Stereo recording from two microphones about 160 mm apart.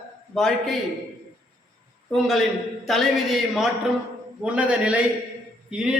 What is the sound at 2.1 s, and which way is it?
A man's voice, centre (ahead or behind).